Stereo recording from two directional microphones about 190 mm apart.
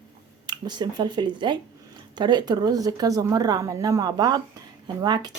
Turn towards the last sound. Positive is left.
turn(degrees=-20)  # may be behind; listen again after turning